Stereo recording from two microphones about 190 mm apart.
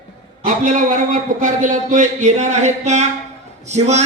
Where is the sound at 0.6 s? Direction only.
45° right (ahead or behind).